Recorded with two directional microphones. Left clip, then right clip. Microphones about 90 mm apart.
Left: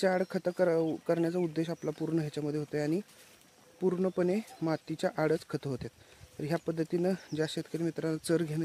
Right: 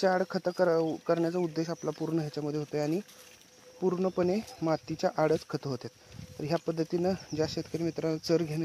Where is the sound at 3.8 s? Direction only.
25° left (ahead or behind).